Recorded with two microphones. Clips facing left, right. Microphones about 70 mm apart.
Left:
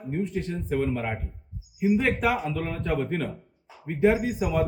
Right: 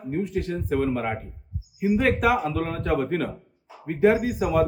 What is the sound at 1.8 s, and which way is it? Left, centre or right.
Speech, right.